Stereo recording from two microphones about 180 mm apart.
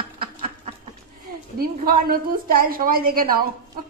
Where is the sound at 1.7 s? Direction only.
55° right (ahead or behind).